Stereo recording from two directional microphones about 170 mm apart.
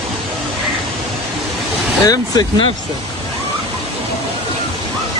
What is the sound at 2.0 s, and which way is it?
Speech, 20° left (ahead or behind).